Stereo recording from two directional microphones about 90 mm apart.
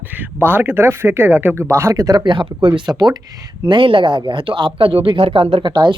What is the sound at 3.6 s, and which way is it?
Speech, 70° right (ahead or behind).